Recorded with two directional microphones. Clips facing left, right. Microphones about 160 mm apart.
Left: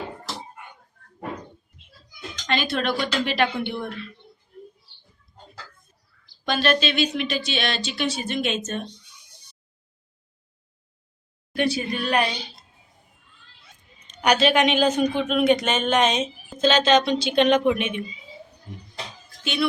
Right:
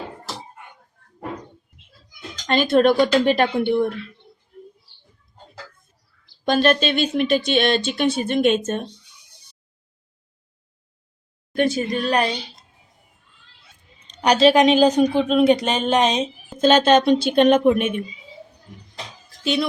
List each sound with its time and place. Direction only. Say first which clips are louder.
2.5 s speech: right 9 dB; 45° right (ahead or behind)
6.4 s speech: right 4 dB; 45° right (ahead or behind)
11.5 s a woman's voice: right 4 dB; 45° right (ahead or behind)
14.0 s a woman's voice: right 5 dB; 30° right (ahead or behind)
16.6 s speech: right 4 dB; 50° right (ahead or behind)